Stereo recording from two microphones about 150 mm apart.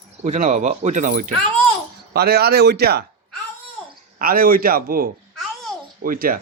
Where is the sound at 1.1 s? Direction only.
70° right (ahead or behind).